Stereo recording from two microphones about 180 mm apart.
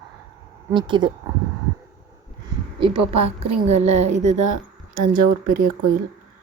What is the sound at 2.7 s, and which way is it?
A woman's voice, 30° right (ahead or behind).